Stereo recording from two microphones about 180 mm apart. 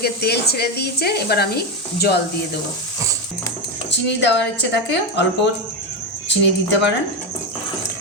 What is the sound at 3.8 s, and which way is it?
Speech, 80° left.